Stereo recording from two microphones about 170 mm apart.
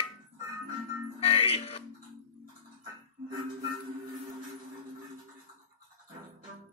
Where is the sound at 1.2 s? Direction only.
35° left (ahead or behind).